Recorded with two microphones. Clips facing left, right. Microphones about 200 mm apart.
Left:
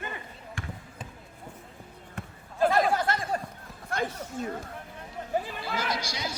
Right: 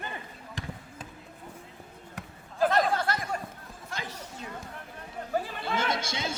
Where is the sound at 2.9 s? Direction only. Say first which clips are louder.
Left 2 dB; 20° left (ahead or behind).